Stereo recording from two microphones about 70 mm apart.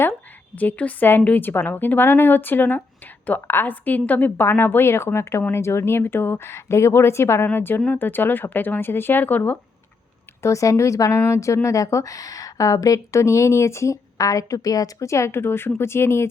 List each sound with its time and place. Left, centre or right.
0.5 s speech: left
10.4 s speech: left